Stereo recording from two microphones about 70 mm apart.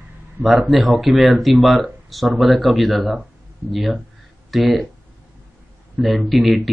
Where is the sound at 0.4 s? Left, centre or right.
Centre.